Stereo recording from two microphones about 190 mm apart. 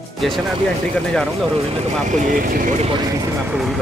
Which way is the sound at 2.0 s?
45° right (ahead or behind).